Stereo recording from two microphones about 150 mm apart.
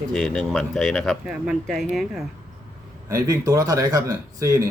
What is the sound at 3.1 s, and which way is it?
A man's voice, 20° right (ahead or behind).